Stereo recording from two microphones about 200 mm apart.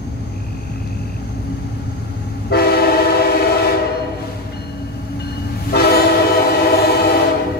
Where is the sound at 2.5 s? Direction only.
50° left (ahead or behind).